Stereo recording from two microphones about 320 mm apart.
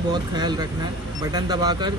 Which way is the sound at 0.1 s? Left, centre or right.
Centre.